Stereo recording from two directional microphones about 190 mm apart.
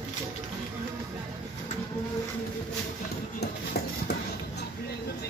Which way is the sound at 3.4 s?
60° left (ahead or behind).